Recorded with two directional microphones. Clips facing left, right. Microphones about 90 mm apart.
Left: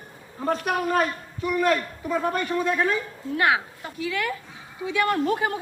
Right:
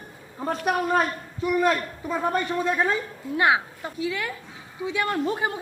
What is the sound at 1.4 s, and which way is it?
A man's voice, 25° right (ahead or behind).